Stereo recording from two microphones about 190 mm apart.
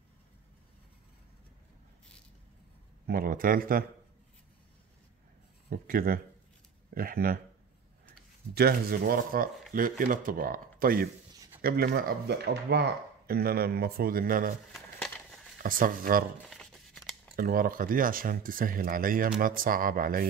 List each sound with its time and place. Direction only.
3.1 s speech: 50° right (ahead or behind)
5.7 s speech: 50° right (ahead or behind)
8.5 s speech: 55° right (ahead or behind)
14.7 s a sound: centre (ahead or behind)
15.6 s speech: 45° right (ahead or behind)
16.4 s a sound: centre (ahead or behind)
17.4 s speech: 50° right (ahead or behind)